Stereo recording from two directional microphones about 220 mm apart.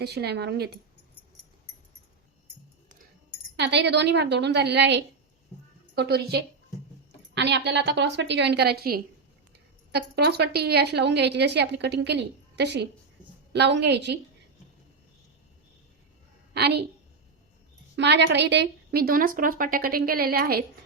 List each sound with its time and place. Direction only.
0.0 s a woman's voice: 50° right (ahead or behind)
3.6 s a woman's voice: 50° right (ahead or behind)
16.6 s a woman's voice: 50° right (ahead or behind)
17.9 s a woman's voice: 50° right (ahead or behind)